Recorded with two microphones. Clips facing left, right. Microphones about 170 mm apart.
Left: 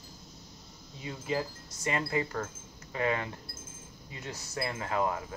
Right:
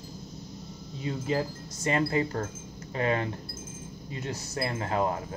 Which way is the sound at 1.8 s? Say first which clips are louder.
Right 5 dB; 30° right (ahead or behind).